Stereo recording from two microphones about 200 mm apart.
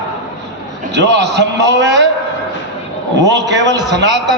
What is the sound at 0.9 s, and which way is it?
A man's voice, 60° right (ahead or behind).